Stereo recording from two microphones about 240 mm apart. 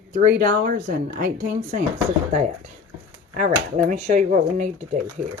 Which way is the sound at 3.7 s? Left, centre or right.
Right.